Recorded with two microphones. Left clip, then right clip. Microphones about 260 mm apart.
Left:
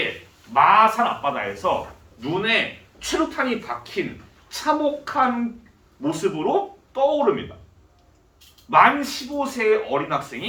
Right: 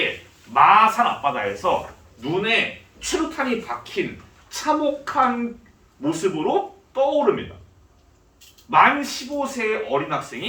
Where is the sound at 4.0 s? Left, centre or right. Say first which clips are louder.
Right 2 dB; centre.